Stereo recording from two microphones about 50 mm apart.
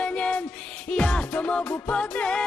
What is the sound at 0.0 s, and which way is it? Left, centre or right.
Music, left.